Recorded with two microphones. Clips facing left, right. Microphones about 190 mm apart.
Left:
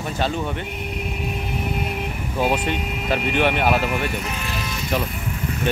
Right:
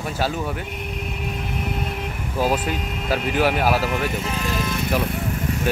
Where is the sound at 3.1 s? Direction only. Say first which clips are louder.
Even; 5° right (ahead or behind).